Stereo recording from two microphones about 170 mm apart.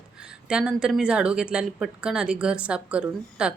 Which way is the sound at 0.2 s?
5° right (ahead or behind).